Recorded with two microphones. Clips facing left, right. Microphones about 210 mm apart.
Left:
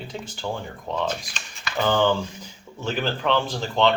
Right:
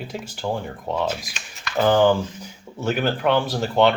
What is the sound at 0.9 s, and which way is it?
Speech, 10° right (ahead or behind).